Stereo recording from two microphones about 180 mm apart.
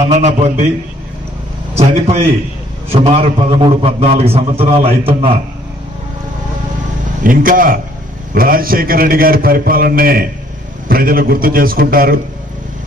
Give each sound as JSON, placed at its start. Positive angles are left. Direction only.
{"t": 0.0, "sound": "a man's voice", "side_deg": -40}
{"t": 1.8, "sound": "a man's voice", "side_deg": -35}
{"t": 7.2, "sound": "a man's voice", "side_deg": -50}